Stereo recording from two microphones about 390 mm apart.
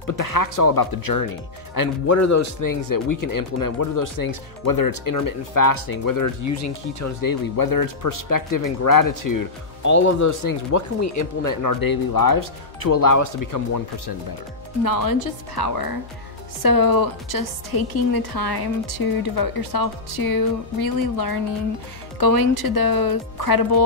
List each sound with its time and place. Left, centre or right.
0.2 s a woman's voice: left
1.8 s speech: left
14.8 s a woman's voice: left
22.5 s a woman's voice: left